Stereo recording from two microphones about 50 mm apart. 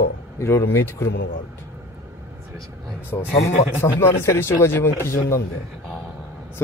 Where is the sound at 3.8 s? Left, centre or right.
Left.